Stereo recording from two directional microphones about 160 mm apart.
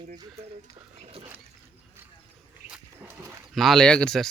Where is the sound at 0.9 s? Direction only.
40° right (ahead or behind).